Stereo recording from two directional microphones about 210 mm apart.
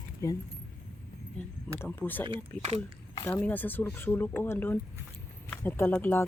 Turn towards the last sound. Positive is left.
turn(degrees=10)  # may be behind; listen again after turning